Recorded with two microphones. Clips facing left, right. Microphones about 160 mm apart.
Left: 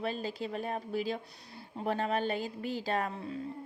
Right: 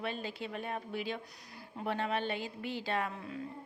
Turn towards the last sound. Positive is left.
turn(degrees=40)  # may be behind; listen again after turning